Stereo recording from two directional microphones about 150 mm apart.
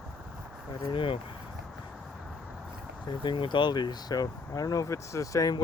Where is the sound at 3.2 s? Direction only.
35° left (ahead or behind).